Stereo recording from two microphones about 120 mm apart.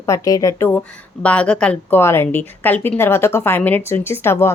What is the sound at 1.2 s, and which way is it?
Speech, 10° left (ahead or behind).